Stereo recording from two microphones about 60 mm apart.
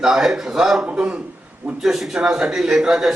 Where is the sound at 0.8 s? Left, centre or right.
Centre.